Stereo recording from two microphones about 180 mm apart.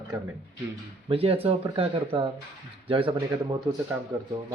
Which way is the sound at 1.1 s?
30° right (ahead or behind).